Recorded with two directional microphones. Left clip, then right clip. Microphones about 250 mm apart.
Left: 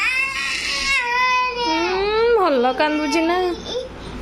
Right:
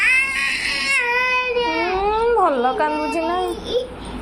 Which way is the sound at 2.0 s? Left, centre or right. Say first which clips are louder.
Even; left.